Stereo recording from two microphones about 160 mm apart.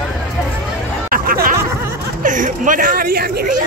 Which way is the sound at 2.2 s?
55° right (ahead or behind).